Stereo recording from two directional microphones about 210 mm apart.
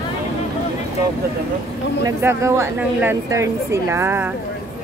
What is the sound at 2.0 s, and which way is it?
A woman's voice, 15° right (ahead or behind).